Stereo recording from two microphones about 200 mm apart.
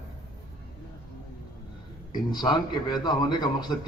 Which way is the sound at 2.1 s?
20° left (ahead or behind).